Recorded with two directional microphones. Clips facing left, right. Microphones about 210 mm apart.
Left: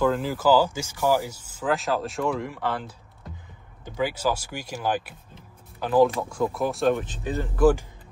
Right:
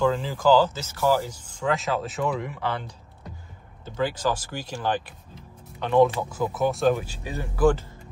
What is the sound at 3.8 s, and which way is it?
Speech, 10° left (ahead or behind).